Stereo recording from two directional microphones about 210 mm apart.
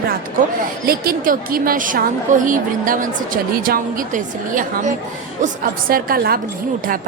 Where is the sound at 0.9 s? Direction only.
45° right (ahead or behind).